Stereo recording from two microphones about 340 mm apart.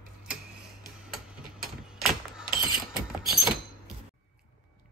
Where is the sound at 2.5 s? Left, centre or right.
Right.